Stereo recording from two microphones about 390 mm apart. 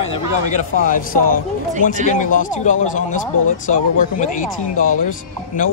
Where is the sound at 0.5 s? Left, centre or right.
Left.